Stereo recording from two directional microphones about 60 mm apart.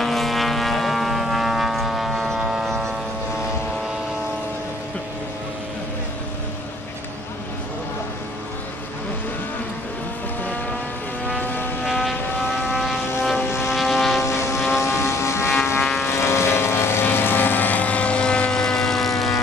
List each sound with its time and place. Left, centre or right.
0.0 s vehicle: centre
2.7 s a sound: centre
11.8 s vehicle: centre
13.5 s vehicle: left
13.7 s vehicle: centre
14.2 s vehicle: left; by 19.4 s centre